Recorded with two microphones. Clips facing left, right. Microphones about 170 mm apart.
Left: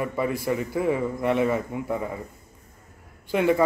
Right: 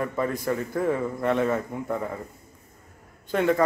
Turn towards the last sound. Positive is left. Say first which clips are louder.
# left 1 dB
turn(degrees=5)  # may be behind; listen again after turning